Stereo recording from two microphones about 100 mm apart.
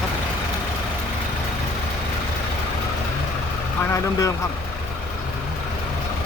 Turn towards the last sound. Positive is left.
turn(degrees=30)  # may be behind; listen again after turning